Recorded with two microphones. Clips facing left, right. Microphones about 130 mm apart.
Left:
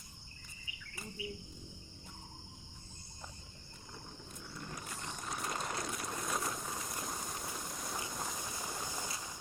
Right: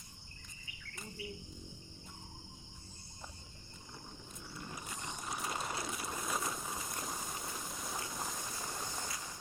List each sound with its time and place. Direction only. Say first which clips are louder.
4.4 s vehicle: even; 5° right (ahead or behind)